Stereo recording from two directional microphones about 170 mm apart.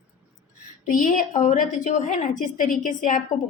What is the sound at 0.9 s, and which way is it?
A woman's voice, 50° left (ahead or behind).